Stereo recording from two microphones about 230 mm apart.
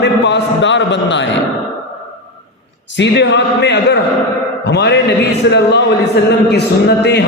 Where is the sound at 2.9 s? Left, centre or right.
Left.